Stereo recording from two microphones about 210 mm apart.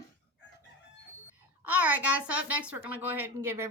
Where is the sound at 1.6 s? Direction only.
10° right (ahead or behind).